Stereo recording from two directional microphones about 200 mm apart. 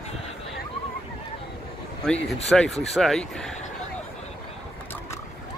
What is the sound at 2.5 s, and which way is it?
Speech, centre (ahead or behind).